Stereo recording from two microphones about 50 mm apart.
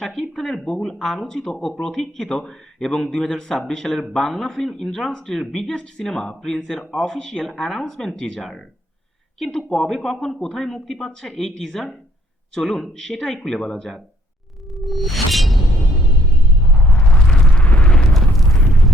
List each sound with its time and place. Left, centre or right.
0.0 s speech: centre
12.5 s music: centre
12.9 s speech: centre
14.7 s music: centre
16.6 s eruption: left
17.6 s eruption: left
18.4 s a sound: centre